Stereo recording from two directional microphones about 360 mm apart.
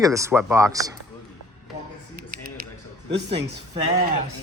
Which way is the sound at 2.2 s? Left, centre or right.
Right.